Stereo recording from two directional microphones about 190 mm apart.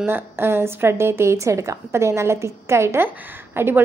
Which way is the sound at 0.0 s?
10° right (ahead or behind).